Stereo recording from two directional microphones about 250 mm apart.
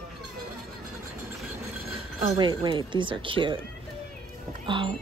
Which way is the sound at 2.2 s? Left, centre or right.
Centre.